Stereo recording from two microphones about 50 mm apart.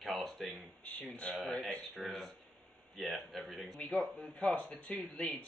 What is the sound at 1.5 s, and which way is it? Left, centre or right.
Speech, centre.